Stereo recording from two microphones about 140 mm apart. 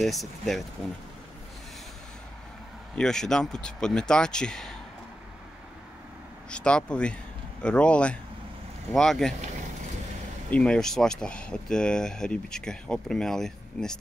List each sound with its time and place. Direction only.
0.0 s speech: centre (ahead or behind)
3.0 s speech: 5° left (ahead or behind)
6.5 s speech: 5° left (ahead or behind)
10.5 s speech: 5° left (ahead or behind)